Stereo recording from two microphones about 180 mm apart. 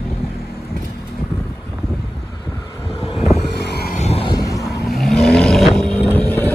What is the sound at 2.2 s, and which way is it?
Vehicle, 20° left (ahead or behind).